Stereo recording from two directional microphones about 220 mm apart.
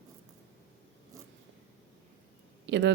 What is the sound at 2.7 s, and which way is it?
Speech, 55° right (ahead or behind).